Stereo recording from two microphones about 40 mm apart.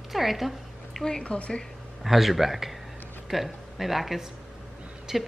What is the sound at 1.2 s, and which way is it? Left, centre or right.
Speech, left.